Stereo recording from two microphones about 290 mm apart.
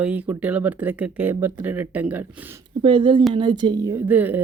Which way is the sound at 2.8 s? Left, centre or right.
Centre.